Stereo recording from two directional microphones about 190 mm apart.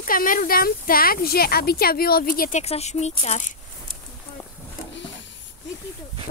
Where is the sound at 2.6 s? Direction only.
35° left (ahead or behind).